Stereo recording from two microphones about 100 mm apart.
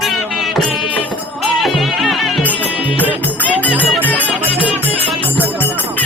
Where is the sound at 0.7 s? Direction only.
55° left (ahead or behind).